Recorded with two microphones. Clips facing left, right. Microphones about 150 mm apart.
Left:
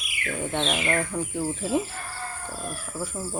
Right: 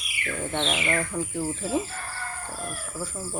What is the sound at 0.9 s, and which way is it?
Speech, 15° left (ahead or behind).